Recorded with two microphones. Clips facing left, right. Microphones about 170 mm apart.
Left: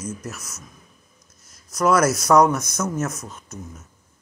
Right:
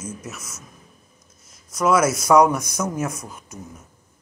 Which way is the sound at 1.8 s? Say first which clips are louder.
Even; 5° right (ahead or behind).